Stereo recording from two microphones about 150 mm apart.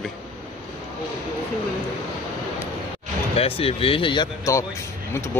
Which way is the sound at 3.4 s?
40° left (ahead or behind).